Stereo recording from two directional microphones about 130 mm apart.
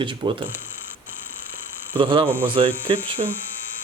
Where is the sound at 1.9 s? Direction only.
40° right (ahead or behind).